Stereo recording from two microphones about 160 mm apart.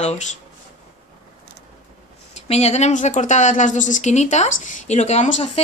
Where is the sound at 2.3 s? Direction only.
40° left (ahead or behind).